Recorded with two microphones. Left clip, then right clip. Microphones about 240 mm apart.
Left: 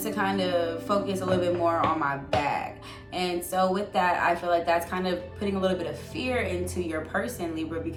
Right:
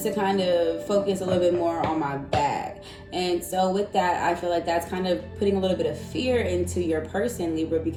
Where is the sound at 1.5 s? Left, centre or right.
Left.